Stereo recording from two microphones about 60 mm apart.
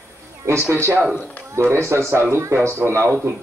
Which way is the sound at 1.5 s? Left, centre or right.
Right.